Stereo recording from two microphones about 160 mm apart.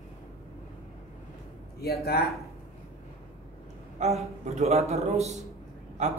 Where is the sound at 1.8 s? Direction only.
80° left.